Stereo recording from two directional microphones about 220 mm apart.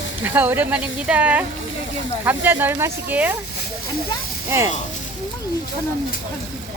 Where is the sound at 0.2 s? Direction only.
10° right (ahead or behind).